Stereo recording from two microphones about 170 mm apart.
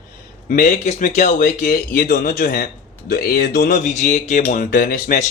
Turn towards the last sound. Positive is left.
turn(degrees=60)  # may be behind; listen again after turning